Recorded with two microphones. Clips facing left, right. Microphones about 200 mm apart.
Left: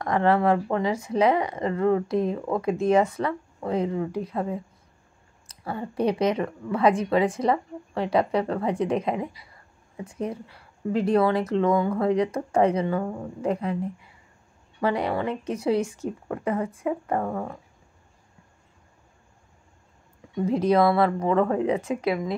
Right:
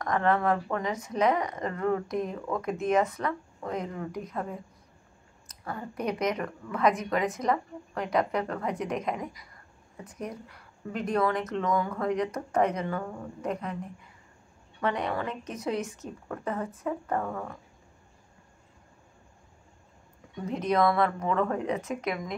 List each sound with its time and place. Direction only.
0.0 s speech: 30° left (ahead or behind)
14.8 s speech: 30° left (ahead or behind)
16.4 s speech: 10° left (ahead or behind)
17.1 s speech: 30° left (ahead or behind)
20.4 s speech: 30° left (ahead or behind)